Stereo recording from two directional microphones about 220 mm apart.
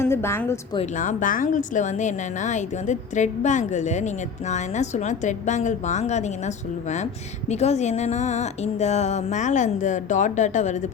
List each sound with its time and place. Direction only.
0.0 s a woman's voice: 10° left (ahead or behind)
0.8 s a woman's voice: 35° left (ahead or behind)
7.5 s a woman's voice: 30° left (ahead or behind)